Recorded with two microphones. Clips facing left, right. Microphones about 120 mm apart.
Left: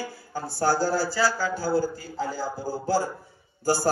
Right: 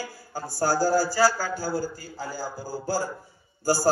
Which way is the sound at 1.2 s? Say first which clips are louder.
Right 2 dB; 40° right (ahead or behind).